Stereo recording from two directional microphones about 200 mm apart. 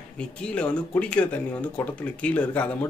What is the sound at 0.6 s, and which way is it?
Speech, 5° left (ahead or behind).